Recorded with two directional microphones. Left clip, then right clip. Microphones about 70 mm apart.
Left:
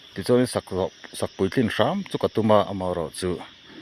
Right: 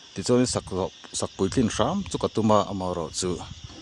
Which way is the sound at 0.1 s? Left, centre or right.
Right.